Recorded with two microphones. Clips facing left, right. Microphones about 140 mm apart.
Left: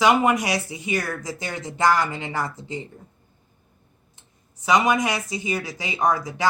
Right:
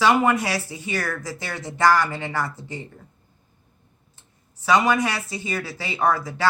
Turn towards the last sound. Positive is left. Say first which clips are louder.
# even
turn(degrees=15)  # may be behind; listen again after turning